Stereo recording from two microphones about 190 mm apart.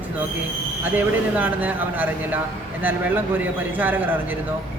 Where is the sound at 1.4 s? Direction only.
10° right (ahead or behind).